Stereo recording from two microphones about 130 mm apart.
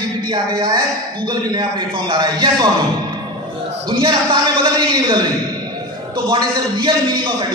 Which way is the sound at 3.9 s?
40° right (ahead or behind).